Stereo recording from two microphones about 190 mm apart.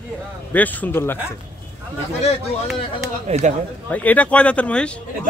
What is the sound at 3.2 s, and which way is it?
Speech, 35° right (ahead or behind).